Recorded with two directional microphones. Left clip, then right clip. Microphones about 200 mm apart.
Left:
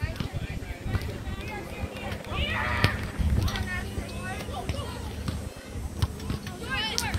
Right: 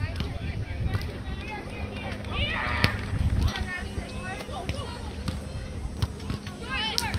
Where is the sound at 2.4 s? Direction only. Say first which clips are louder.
Right 1 dB; 55° right (ahead or behind).